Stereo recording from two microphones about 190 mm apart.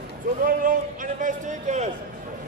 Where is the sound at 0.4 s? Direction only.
45° right (ahead or behind).